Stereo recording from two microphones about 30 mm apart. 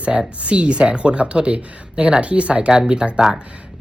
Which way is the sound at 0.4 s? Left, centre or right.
Right.